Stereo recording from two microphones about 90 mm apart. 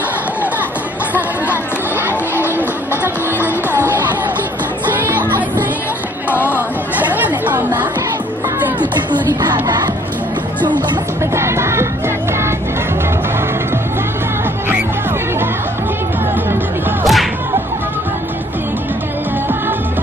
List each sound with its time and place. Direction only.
1.5 s chatter: 20° right (ahead or behind)
4.9 s music: 20° right (ahead or behind)
6.3 s chatter: 20° right (ahead or behind)
8.7 s music: 55° right (ahead or behind)
11.3 s a sound: 30° right (ahead or behind)
17.0 s whip: centre (ahead or behind)